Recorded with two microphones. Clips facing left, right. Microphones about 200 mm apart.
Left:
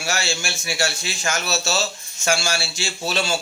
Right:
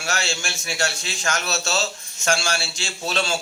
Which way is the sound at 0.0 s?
5° left (ahead or behind).